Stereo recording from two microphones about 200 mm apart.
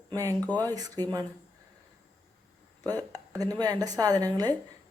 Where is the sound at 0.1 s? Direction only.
15° right (ahead or behind).